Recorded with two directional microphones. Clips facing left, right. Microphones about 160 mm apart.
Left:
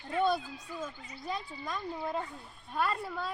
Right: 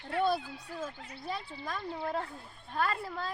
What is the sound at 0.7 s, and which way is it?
Speech, 70° right (ahead or behind).